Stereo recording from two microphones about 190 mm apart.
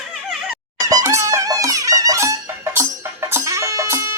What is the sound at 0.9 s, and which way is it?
Music, 15° right (ahead or behind).